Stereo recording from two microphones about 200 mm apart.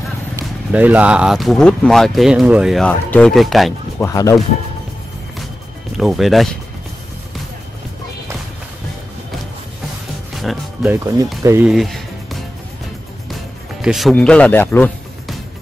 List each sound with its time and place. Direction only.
0.4 s speech: 10° right (ahead or behind)
4.0 s speech: 15° left (ahead or behind)
5.9 s speech: centre (ahead or behind)
10.3 s music: centre (ahead or behind)
11.4 s speech: 10° right (ahead or behind)
11.7 s music: centre (ahead or behind)